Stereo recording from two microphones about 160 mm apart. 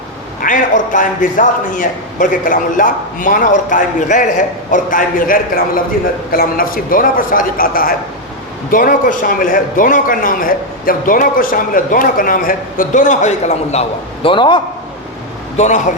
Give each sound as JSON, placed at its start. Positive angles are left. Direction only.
{"t": 0.4, "sound": "a man's voice", "side_deg": 55}
{"t": 15.5, "sound": "a man's voice", "side_deg": 45}